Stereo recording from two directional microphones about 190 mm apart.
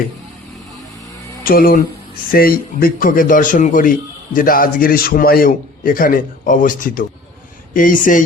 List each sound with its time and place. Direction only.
1.5 s a man's voice: 50° left (ahead or behind)